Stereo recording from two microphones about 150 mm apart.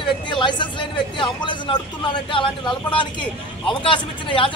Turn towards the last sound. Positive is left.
turn(degrees=35)  # may be behind; listen again after turning